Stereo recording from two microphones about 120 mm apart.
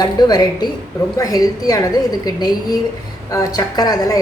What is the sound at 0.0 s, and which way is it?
A woman's voice, 35° left (ahead or behind).